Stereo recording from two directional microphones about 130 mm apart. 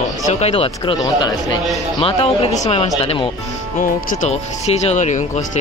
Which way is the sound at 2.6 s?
60° left (ahead or behind).